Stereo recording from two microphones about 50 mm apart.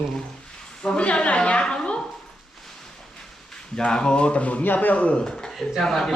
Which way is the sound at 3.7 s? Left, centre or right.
Centre.